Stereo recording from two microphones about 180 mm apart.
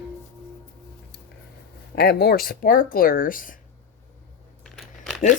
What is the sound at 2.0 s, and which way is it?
Speech, 60° left (ahead or behind).